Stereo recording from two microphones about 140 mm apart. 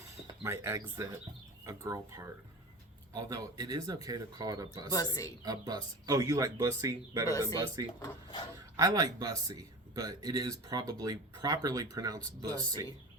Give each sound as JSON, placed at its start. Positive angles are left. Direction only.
{"t": 0.4, "sound": "speech", "side_deg": -20}
{"t": 4.9, "sound": "speech", "side_deg": 25}
{"t": 5.4, "sound": "speech", "side_deg": -30}